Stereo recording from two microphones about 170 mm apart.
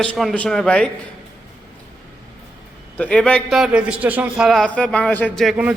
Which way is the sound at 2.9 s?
5° left (ahead or behind).